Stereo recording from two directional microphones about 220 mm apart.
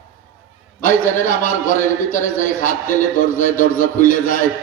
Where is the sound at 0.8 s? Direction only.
35° left (ahead or behind).